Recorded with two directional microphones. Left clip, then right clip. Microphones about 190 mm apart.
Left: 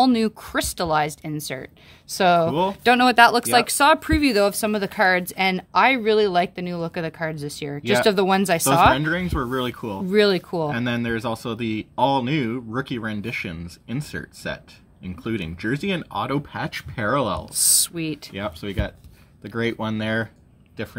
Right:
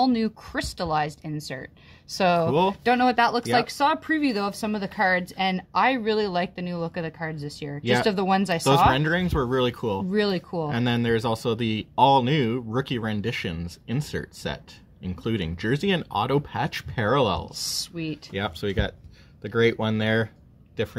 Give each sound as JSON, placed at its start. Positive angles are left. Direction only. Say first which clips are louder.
{"t": 0.0, "sound": "speech", "louder": "left 4 dB", "side_deg": 30}
{"t": 2.8, "sound": "speech", "louder": "left 10 dB", "side_deg": 25}
{"t": 8.9, "sound": "speech", "louder": "left 1 dB", "side_deg": -50}
{"t": 10.1, "sound": "speech", "louder": "left 10 dB", "side_deg": 25}
{"t": 10.7, "sound": "speech", "louder": "right 1 dB", "side_deg": -55}
{"t": 17.6, "sound": "speech", "louder": "left 7 dB", "side_deg": 30}
{"t": 18.3, "sound": "speech", "louder": "right 2 dB", "side_deg": -55}